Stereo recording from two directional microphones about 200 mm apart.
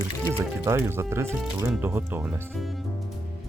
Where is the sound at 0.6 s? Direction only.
15° right (ahead or behind).